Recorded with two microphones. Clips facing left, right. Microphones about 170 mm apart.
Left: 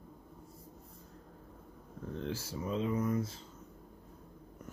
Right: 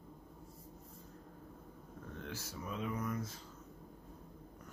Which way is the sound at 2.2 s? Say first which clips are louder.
Left 7 dB; 25° left (ahead or behind).